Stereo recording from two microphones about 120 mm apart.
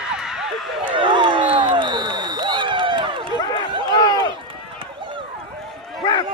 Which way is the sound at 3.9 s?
30° left (ahead or behind).